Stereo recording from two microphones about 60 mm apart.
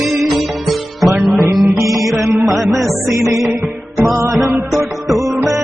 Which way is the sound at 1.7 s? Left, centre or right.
Right.